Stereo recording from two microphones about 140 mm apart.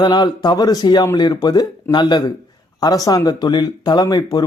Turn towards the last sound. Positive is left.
turn(degrees=30)  # may be behind; listen again after turning